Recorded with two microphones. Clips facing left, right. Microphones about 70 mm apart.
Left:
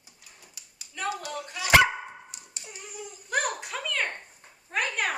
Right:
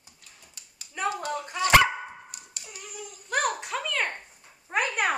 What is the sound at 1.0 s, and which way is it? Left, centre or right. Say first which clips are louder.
Clapping: right 3 dB; right.